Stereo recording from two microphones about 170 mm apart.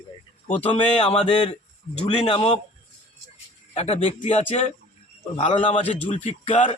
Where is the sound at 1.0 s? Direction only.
40° left (ahead or behind).